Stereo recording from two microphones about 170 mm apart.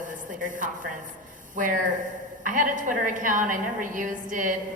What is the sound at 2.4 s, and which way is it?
A woman's voice, 50° right (ahead or behind).